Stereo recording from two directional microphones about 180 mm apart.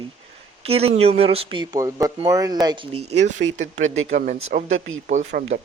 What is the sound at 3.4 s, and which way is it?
Speech, 85° right.